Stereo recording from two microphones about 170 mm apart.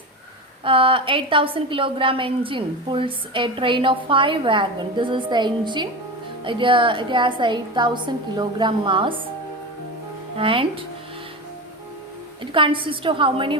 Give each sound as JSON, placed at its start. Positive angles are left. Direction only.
{"t": 0.6, "sound": "a woman's voice", "side_deg": -30}
{"t": 10.3, "sound": "a woman's voice", "side_deg": -30}
{"t": 12.5, "sound": "a woman's voice", "side_deg": -30}